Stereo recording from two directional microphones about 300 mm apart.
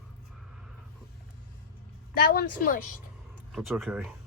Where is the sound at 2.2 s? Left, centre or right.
Left.